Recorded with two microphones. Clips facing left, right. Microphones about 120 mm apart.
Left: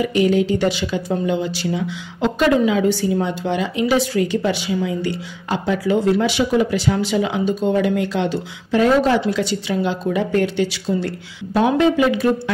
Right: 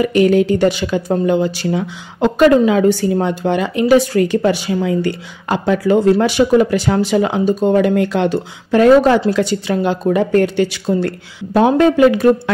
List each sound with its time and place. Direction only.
0.0 s speech: 55° right (ahead or behind)